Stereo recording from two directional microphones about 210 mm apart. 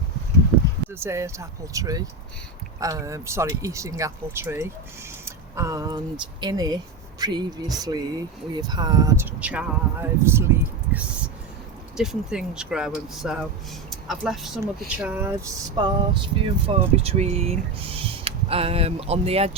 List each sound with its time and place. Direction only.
0.9 s speech: 10° right (ahead or behind); by 19.5 s 30° right (ahead or behind)